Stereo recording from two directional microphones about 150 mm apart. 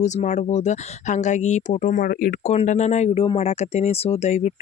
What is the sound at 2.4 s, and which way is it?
Speech, 45° left (ahead or behind).